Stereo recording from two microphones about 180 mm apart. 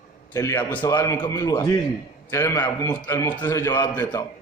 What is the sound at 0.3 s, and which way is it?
A man's voice, 15° left (ahead or behind).